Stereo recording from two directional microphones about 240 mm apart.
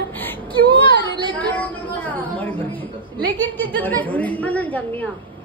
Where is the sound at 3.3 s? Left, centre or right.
Centre.